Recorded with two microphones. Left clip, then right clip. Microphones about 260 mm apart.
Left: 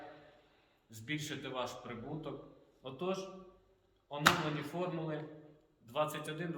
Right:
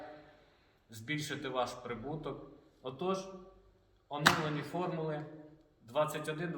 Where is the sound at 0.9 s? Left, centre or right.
Centre.